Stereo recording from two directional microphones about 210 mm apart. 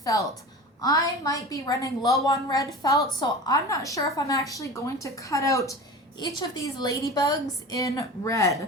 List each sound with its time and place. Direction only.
0.1 s a woman's voice: 15° left (ahead or behind)